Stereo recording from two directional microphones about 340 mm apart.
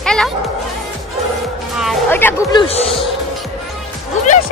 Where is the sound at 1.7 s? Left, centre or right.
Centre.